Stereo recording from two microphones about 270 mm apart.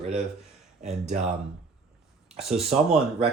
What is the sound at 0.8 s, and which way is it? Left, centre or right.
Speech, right.